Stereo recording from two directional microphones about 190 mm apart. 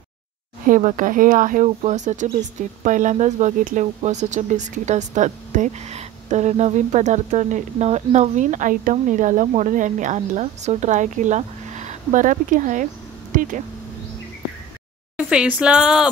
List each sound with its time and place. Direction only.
0.7 s speech: 40° right (ahead or behind)
15.1 s speech: 5° right (ahead or behind)